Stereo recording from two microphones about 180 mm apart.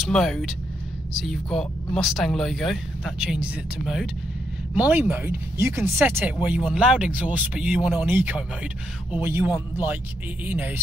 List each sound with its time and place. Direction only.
0.0 s speech: centre (ahead or behind)